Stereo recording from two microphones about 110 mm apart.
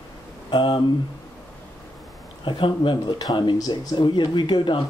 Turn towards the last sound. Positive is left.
turn(degrees=45)  # may be behind; listen again after turning